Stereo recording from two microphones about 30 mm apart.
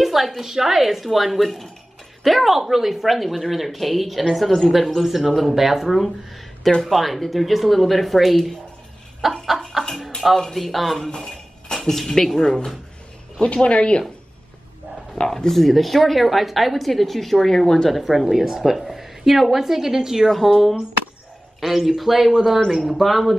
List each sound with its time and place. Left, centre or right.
0.0 s a sound: centre
0.5 s speech: centre
10.3 s speech: centre
11.1 s a sound: centre
12.4 s speech: centre
13.4 s speech: left
15.2 s speech: centre
17.8 s a woman's voice: centre
20.2 s a woman's voice: centre